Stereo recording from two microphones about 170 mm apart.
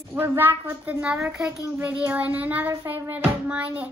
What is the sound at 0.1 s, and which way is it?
Speech, 10° right (ahead or behind).